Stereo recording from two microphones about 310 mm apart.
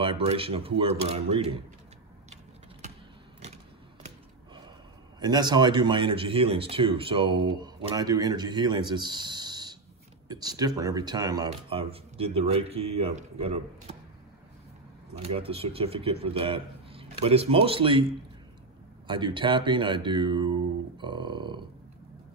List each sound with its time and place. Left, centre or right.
0.0 s speech: centre
5.2 s speech: centre
15.1 s speech: centre
19.0 s speech: centre